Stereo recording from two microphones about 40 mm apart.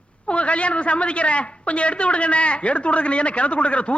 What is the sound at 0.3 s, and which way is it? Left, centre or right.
A man's voice, left.